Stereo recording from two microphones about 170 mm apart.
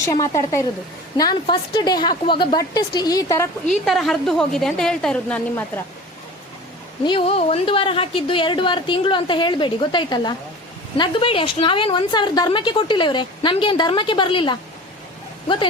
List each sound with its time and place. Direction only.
0.0 s a woman's voice: 20° left (ahead or behind)
3.7 s a woman's voice: centre (ahead or behind)
7.0 s a woman's voice: 30° left (ahead or behind)